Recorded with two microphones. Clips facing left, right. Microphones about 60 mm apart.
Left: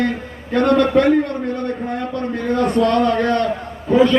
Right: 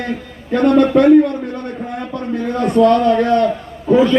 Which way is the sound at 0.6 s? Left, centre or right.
Left.